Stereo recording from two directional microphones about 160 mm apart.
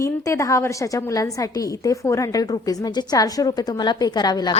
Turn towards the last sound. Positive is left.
turn(degrees=25)  # may be behind; listen again after turning